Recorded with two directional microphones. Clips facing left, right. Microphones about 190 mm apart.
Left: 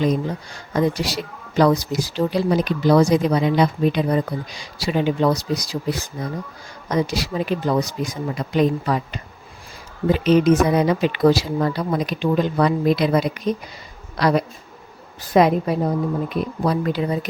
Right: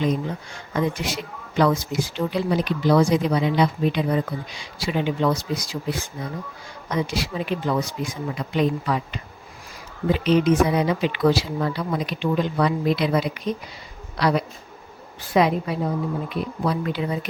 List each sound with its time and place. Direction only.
0.0 s speech: 40° left (ahead or behind)